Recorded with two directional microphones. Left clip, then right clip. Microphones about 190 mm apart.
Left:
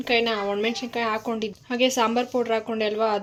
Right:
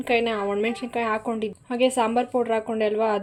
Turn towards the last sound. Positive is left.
turn(degrees=-10)  # may be behind; listen again after turning